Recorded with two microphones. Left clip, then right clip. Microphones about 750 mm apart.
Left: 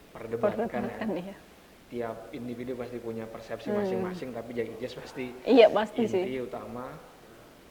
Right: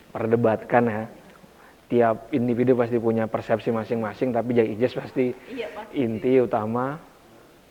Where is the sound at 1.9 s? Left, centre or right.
Right.